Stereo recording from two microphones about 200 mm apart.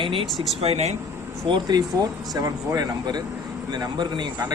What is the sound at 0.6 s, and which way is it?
Speech, 30° right (ahead or behind).